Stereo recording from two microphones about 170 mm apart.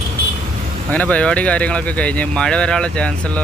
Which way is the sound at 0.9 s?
10° left (ahead or behind).